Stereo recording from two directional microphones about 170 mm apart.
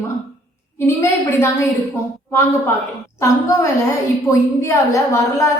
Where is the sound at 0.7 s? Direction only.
15° left (ahead or behind).